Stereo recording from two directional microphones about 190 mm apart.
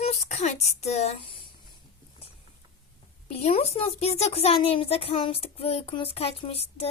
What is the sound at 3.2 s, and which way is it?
Speech, 35° left (ahead or behind).